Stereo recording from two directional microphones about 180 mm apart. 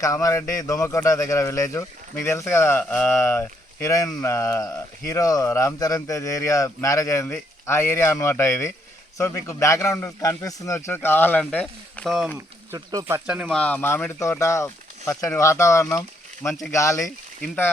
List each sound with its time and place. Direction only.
0.0 s a man's voice: 20° left (ahead or behind); by 12.3 s centre (ahead or behind)
12.7 s speech: 20° right (ahead or behind)
13.2 s speech: 5° right (ahead or behind)
13.5 s a man's voice: 5° left (ahead or behind)
17.0 s speech: 5° left (ahead or behind)